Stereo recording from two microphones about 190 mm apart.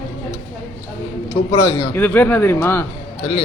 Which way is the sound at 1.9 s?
10° left (ahead or behind).